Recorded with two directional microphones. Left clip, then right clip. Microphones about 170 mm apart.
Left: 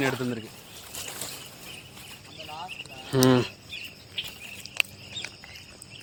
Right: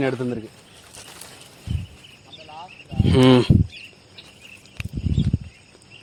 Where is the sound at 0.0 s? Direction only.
65° right (ahead or behind).